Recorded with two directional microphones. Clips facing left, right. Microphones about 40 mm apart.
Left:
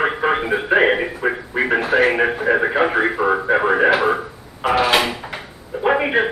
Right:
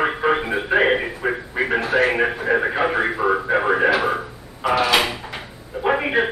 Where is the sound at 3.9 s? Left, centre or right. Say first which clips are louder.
Left 3 dB; centre.